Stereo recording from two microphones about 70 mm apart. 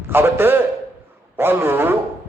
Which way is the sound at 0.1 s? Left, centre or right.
Right.